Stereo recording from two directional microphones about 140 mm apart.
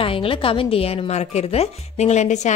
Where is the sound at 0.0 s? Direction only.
40° left (ahead or behind).